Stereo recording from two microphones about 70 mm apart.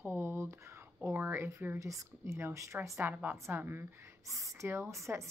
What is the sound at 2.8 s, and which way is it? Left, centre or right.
A woman's voice, right.